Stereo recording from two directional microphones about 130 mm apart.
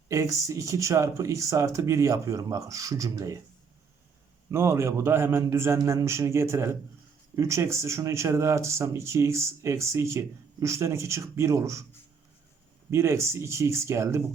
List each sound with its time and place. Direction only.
0.1 s speech: 25° right (ahead or behind)
4.5 s speech: 20° right (ahead or behind)
12.9 s speech: 20° right (ahead or behind)